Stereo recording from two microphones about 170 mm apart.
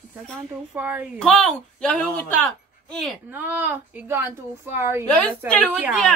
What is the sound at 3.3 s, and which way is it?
A woman's voice, 10° right (ahead or behind).